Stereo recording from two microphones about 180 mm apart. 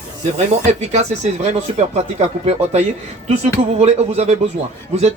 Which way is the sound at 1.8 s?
40° right (ahead or behind).